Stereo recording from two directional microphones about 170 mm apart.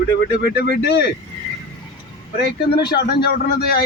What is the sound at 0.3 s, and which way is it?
Speech, 70° left (ahead or behind).